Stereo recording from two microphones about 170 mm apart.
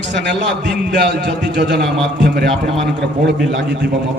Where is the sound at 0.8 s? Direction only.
80° right.